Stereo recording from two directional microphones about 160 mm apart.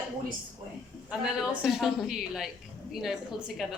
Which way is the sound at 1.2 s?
5° right (ahead or behind).